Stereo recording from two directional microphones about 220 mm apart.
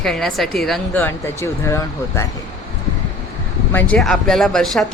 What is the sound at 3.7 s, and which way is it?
Speech, 5° left (ahead or behind).